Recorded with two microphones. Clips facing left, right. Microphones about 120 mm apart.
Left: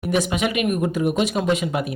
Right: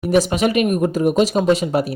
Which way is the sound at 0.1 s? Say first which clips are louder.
Right 5 dB; 40° right (ahead or behind).